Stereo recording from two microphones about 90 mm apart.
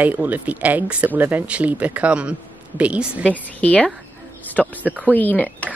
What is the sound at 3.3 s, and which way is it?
Speech, 15° left (ahead or behind).